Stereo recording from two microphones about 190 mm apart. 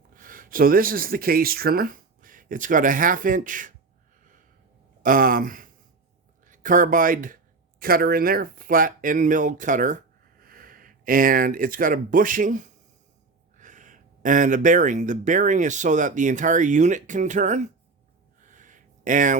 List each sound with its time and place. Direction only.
0.1 s speech: 45° right (ahead or behind)
5.0 s speech: 50° right (ahead or behind)
18.4 s a sound: 40° right (ahead or behind)